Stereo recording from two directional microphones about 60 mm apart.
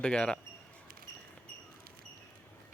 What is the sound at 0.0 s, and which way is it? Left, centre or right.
Speech, centre.